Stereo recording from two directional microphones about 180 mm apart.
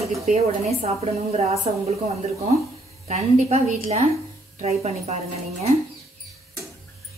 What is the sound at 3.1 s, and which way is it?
A woman's voice, 35° right (ahead or behind).